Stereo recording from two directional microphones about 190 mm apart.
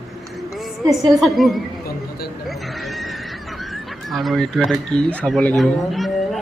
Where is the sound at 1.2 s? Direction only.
Centre (ahead or behind).